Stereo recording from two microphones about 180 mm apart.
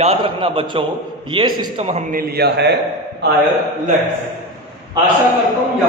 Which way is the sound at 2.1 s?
60° right (ahead or behind).